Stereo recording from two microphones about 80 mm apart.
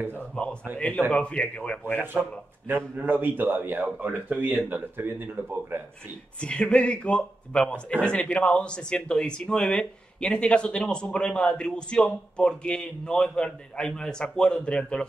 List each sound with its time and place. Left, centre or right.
0.4 s a sound: centre
0.7 s speech: centre
2.7 s speech: right
6.4 s speech: centre